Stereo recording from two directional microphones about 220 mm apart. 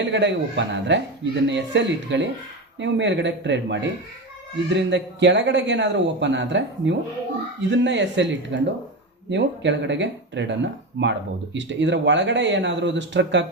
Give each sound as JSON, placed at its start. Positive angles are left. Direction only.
{"t": 0.0, "sound": "speech", "side_deg": -55}